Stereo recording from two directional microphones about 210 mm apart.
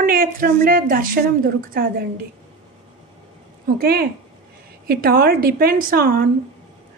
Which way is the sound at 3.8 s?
45° right (ahead or behind).